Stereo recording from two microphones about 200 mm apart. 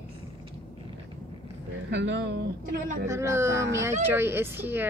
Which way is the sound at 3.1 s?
15° right (ahead or behind).